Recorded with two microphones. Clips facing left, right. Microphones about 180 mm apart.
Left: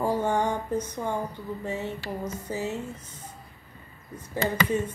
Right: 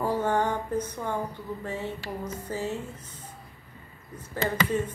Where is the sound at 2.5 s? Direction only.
15° left (ahead or behind).